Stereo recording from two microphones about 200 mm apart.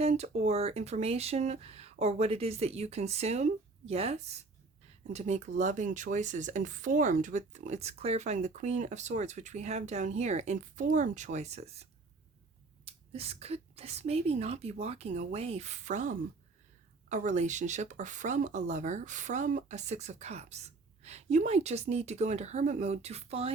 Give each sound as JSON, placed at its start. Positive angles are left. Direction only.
{"t": 0.0, "sound": "speech", "side_deg": -30}